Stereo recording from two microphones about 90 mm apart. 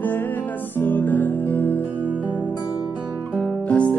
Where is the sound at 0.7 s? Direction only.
20° left (ahead or behind).